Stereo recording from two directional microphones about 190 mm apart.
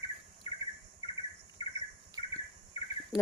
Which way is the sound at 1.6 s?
30° left (ahead or behind).